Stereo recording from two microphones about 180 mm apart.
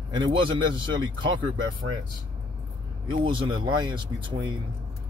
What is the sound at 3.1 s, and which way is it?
Speech, 30° right (ahead or behind).